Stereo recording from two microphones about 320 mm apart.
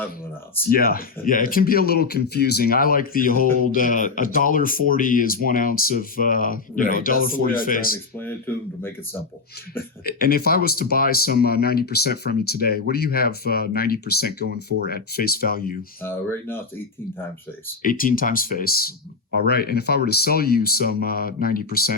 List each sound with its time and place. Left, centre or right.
0.7 s speech: left
9.7 s speech: left
17.8 s speech: left